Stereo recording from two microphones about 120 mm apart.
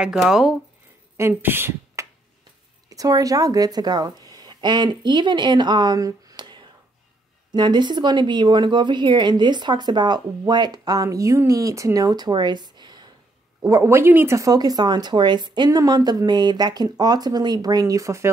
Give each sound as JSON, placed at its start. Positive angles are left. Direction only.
{"t": 0.0, "sound": "speech", "side_deg": -5}
{"t": 1.1, "sound": "speech", "side_deg": -20}
{"t": 2.9, "sound": "speech", "side_deg": -30}
{"t": 13.6, "sound": "speech", "side_deg": -25}